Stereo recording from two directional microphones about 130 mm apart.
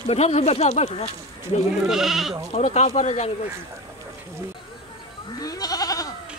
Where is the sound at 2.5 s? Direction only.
60° left (ahead or behind).